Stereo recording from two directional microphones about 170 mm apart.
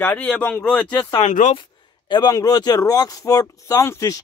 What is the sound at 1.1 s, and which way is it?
Speech, 40° left (ahead or behind).